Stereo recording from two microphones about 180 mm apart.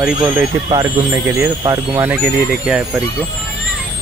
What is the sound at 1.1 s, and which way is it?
Speech, 15° right (ahead or behind).